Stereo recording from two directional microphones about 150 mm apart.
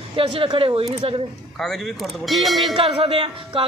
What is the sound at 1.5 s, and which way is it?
Speech, centre (ahead or behind).